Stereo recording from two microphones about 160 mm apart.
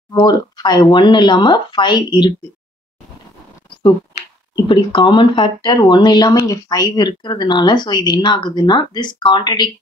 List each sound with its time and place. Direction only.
0.1 s speech: 25° left (ahead or behind)
4.6 s speech: 30° left (ahead or behind)